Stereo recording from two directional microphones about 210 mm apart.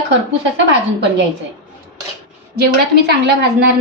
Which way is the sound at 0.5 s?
55° right (ahead or behind).